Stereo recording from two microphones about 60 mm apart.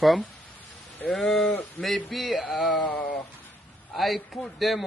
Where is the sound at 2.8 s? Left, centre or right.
Left.